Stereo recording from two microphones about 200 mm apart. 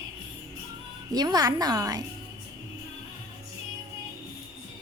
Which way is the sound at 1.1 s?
20° right (ahead or behind).